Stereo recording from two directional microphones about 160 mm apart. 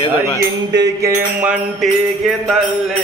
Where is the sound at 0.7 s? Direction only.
20° right (ahead or behind).